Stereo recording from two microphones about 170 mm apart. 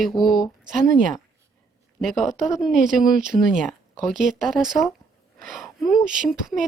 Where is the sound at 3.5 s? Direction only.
Centre (ahead or behind).